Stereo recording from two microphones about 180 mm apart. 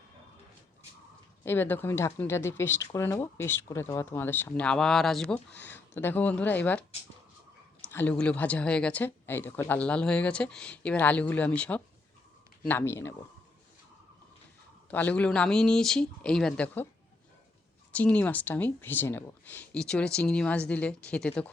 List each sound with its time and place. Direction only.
1.5 s speech: 10° left (ahead or behind)
7.9 s speech: 10° left (ahead or behind)
14.8 s speech: 10° left (ahead or behind)
17.9 s speech: 10° left (ahead or behind)